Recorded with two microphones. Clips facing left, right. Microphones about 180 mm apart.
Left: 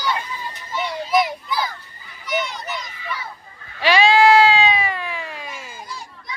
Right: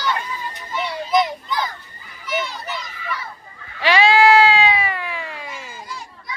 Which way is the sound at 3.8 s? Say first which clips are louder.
Even; 15° left (ahead or behind).